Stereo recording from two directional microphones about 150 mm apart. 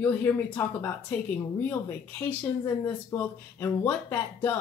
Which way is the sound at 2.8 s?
15° left (ahead or behind).